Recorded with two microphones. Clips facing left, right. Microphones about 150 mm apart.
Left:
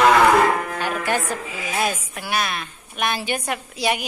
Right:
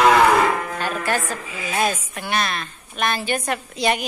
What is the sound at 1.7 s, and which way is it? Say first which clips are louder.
A woman's voice: right 2 dB; 5° left (ahead or behind).